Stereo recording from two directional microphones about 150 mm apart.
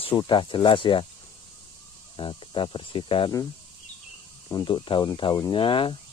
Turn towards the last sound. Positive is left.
turn(degrees=35)  # may be behind; listen again after turning